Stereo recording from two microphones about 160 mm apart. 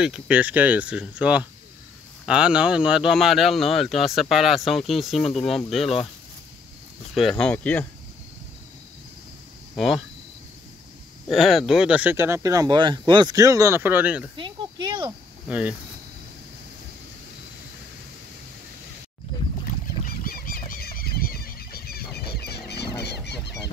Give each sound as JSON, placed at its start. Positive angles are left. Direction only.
{"t": 0.0, "sound": "speech", "side_deg": -5}
{"t": 7.2, "sound": "speech", "side_deg": 5}
{"t": 9.8, "sound": "speech", "side_deg": 0}
{"t": 11.2, "sound": "speech", "side_deg": 0}
{"t": 14.3, "sound": "cricket", "side_deg": -30}
{"t": 15.4, "sound": "speech", "side_deg": -10}
{"t": 20.2, "sound": "a sound", "side_deg": 65}